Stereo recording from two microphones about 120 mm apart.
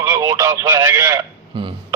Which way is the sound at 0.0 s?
30° right (ahead or behind).